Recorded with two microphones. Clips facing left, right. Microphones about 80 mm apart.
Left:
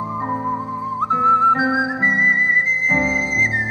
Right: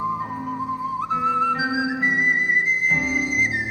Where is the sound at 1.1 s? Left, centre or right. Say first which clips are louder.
Left 7 dB; left.